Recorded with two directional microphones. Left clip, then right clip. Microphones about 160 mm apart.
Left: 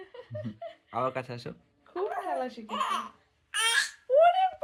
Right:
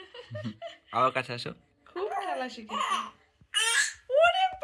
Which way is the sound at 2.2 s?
55° left (ahead or behind).